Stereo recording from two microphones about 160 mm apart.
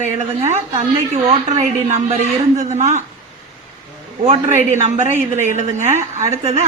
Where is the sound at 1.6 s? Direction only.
45° right (ahead or behind).